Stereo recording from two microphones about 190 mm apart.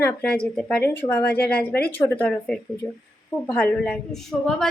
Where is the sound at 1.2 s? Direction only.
55° left (ahead or behind).